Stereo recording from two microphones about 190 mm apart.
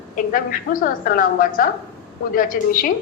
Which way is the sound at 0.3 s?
45° left (ahead or behind).